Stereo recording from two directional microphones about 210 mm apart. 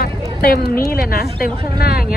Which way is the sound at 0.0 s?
45° left (ahead or behind).